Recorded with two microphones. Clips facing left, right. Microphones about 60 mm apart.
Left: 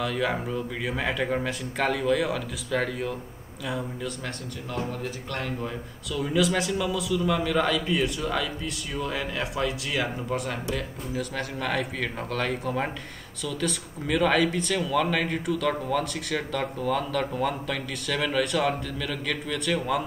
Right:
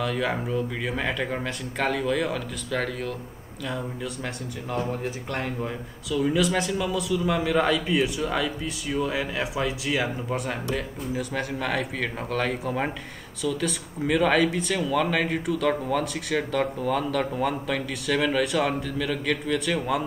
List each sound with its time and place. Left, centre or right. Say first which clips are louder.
0.0 s speech: right 1 dB; centre
5.0 s speech: right 2 dB; centre
6.0 s speech: right 2 dB; centre